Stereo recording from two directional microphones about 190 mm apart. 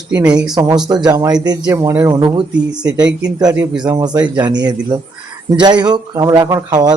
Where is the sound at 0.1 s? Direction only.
5° right (ahead or behind).